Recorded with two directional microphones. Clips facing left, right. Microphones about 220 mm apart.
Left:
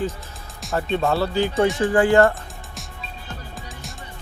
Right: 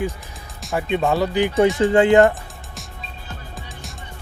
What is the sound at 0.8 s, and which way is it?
Speech, 10° right (ahead or behind).